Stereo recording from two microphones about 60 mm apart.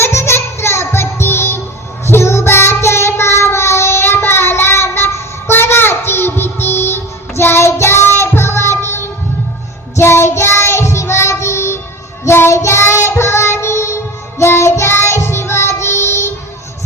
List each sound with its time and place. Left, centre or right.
0.0 s music: left
2.0 s child singing: left
10.0 s child singing: left